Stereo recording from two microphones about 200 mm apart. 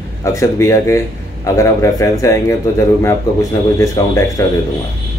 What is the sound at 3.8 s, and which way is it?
Speech, 15° left (ahead or behind).